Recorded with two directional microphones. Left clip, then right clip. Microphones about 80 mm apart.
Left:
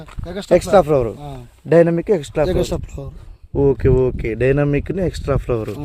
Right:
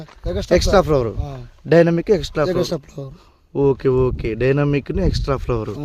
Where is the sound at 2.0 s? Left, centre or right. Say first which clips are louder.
Even; centre.